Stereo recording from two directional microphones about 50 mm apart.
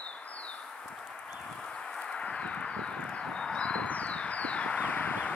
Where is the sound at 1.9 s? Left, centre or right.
Centre.